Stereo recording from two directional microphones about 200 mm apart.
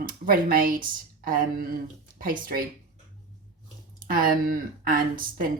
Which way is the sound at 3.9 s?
45° right (ahead or behind).